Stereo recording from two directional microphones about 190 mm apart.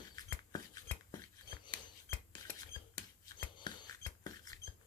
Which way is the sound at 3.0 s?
20° left (ahead or behind).